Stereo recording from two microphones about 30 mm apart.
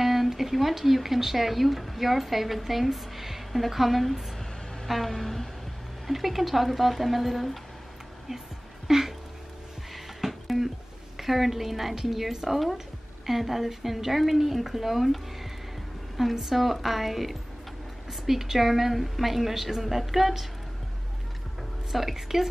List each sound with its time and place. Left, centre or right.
0.0 s speech: centre
4.8 s a sound: centre
6.0 s speech: centre
8.8 s music: centre
11.1 s a woman's voice: centre
16.2 s speech: centre
21.9 s a woman's voice: centre